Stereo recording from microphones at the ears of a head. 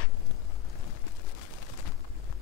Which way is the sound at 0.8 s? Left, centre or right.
Left.